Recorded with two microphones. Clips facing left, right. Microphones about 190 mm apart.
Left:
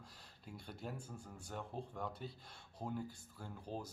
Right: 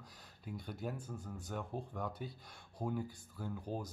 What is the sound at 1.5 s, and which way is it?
Speech, 5° right (ahead or behind).